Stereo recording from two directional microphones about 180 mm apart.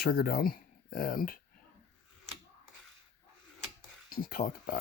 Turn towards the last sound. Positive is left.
turn(degrees=55)  # may be behind; listen again after turning